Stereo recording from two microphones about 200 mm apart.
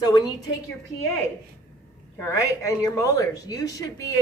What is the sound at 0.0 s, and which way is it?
Speech, 20° left (ahead or behind).